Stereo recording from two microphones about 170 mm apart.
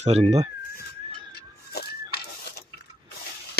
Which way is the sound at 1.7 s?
70° left (ahead or behind).